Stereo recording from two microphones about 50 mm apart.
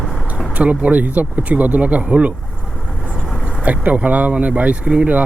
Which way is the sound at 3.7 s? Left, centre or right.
Right.